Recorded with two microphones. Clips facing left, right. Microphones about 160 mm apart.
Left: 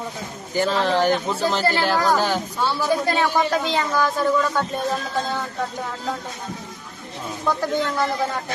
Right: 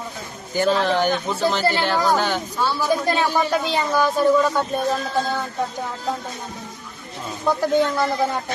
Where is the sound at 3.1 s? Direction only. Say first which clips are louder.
Even; 15° right (ahead or behind).